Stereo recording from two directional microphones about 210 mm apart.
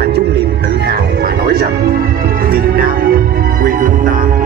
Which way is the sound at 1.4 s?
50° right (ahead or behind).